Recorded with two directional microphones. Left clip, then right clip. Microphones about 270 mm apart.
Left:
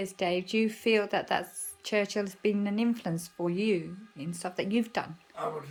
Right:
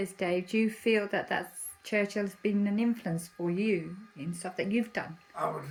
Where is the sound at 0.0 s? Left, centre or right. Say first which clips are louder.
Left 1 dB; centre.